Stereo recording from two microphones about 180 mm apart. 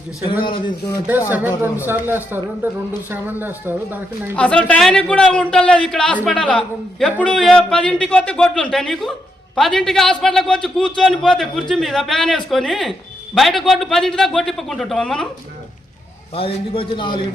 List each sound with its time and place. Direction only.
1.3 s a man's voice: 10° right (ahead or behind)
4.4 s a man's voice: 5° left (ahead or behind)
16.3 s a man's voice: 30° left (ahead or behind)